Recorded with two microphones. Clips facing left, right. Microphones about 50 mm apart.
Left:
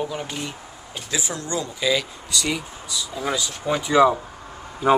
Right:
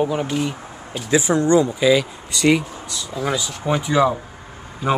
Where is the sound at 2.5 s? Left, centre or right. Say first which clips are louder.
Right 10 dB; right.